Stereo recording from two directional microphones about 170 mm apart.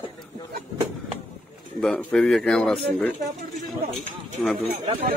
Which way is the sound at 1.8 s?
5° left (ahead or behind).